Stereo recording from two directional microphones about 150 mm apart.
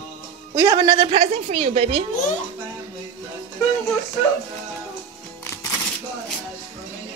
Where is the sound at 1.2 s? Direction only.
45° right (ahead or behind).